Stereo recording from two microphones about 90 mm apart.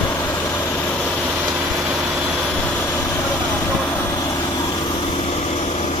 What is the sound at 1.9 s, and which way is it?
Vehicle, 5° right (ahead or behind).